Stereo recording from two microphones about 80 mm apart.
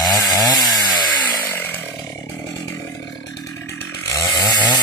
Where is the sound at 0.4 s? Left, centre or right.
Left.